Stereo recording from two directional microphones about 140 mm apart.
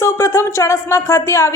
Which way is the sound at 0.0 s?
20° left (ahead or behind).